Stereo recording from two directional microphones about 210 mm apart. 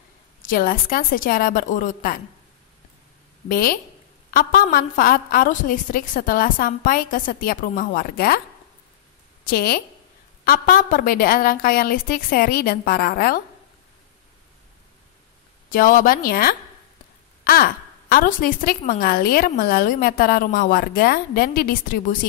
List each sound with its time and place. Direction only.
0.4 s a woman's voice: 40° left (ahead or behind)
3.4 s a woman's voice: 40° left (ahead or behind)
9.4 s a woman's voice: 45° left (ahead or behind)
15.7 s a woman's voice: 40° left (ahead or behind)